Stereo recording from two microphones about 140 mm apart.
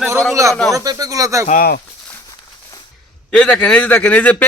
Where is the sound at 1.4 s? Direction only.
80° left.